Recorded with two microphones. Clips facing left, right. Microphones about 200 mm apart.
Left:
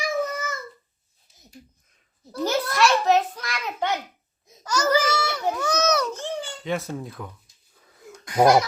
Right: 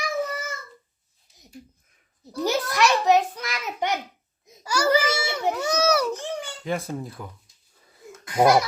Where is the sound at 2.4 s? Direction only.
15° right (ahead or behind).